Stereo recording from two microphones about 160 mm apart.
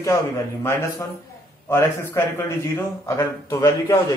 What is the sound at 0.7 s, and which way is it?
A man's voice, 15° left (ahead or behind).